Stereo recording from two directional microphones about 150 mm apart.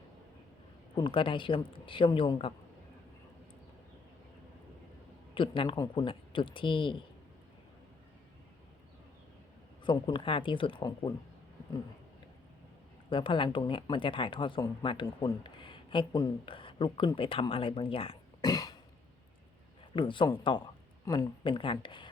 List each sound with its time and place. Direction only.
0.9 s speech: 35° left (ahead or behind)
5.3 s speech: 35° left (ahead or behind)
9.8 s speech: 35° left (ahead or behind)
13.1 s speech: 35° left (ahead or behind)
18.4 s cough: 25° left (ahead or behind)
20.0 s speech: 30° left (ahead or behind)
21.0 s speech: 20° left (ahead or behind)
21.4 s speech: 35° left (ahead or behind)